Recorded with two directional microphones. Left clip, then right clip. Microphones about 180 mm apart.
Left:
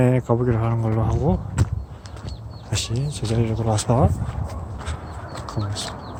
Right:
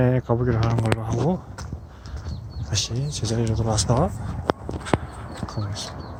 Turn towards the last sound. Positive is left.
turn(degrees=20)  # may be behind; listen again after turning